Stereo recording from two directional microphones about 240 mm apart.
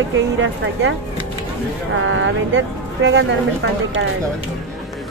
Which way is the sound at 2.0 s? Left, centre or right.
Right.